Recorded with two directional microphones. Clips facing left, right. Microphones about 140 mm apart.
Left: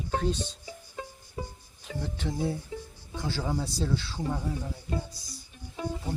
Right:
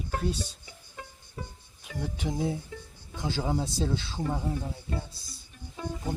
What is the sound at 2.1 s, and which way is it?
Speech, 15° right (ahead or behind).